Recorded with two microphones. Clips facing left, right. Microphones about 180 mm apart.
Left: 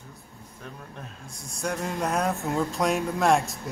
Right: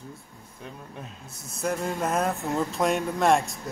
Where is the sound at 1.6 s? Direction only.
Centre (ahead or behind).